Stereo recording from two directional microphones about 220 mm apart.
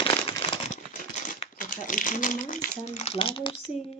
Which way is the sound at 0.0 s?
20° left (ahead or behind).